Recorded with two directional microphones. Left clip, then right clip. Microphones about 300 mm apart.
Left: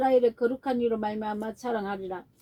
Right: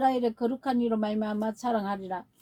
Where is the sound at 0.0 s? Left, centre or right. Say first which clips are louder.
Left 3 dB; right.